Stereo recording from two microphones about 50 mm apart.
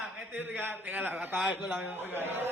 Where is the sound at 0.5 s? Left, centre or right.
Right.